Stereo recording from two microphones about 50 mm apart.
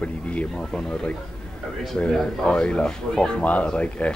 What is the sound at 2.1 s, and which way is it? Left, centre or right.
Speech, centre.